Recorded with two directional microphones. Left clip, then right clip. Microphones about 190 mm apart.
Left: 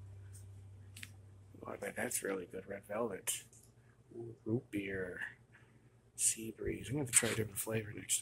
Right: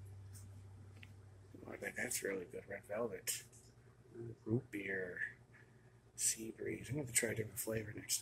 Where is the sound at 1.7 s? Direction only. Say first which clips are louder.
Left 3 dB; 15° left (ahead or behind).